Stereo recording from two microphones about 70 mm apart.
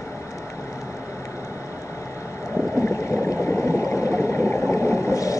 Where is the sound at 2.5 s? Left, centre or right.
Left.